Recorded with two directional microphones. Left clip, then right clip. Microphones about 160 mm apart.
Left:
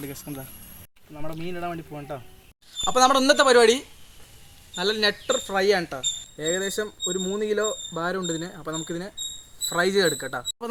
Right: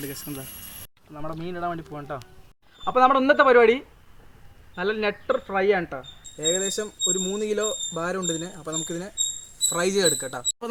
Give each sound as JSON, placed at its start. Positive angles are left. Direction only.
{"t": 0.0, "sound": "speech", "side_deg": 10}
{"t": 1.1, "sound": "speech", "side_deg": 30}
{"t": 6.4, "sound": "speech", "side_deg": 10}
{"t": 10.6, "sound": "speech", "side_deg": 0}